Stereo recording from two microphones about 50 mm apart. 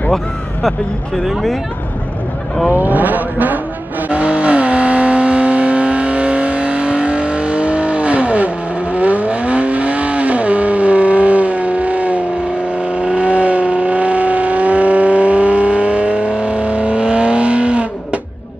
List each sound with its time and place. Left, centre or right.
0.1 s speech: centre
2.7 s a sound: right
4.1 s vehicle: right